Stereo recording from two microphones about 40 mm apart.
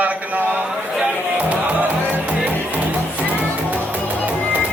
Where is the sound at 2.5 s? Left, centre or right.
Right.